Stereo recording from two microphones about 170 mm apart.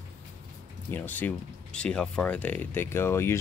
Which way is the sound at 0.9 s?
10° left (ahead or behind).